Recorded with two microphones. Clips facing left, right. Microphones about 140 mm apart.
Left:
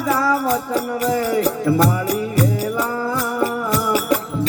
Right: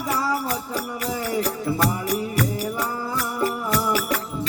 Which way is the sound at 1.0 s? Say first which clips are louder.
Left 7 dB; 70° left (ahead or behind).